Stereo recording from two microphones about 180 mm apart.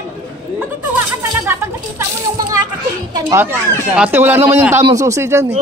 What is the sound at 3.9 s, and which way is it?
Speech, 10° right (ahead or behind).